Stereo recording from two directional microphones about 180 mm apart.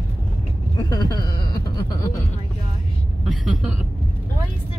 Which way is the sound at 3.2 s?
Centre (ahead or behind).